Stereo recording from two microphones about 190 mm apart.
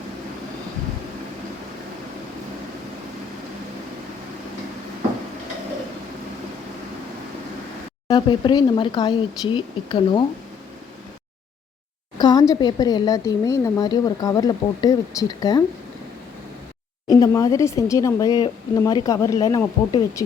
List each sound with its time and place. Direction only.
8.0 s speech: 25° left (ahead or behind)
12.1 s speech: 20° left (ahead or behind)
17.1 s speech: 20° left (ahead or behind)